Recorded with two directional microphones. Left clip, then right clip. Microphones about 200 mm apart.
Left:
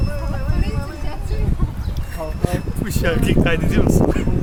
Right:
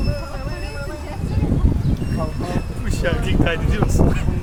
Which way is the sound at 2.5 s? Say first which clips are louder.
Left 2 dB; 50° left (ahead or behind).